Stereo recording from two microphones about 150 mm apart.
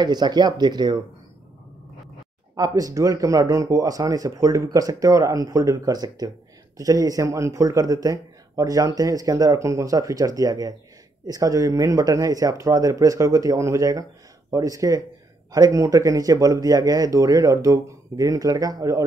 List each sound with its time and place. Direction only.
0.0 s speech: 30° right (ahead or behind)
2.5 s speech: 25° right (ahead or behind)